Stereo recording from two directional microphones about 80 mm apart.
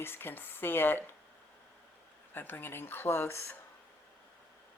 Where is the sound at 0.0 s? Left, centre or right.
Left.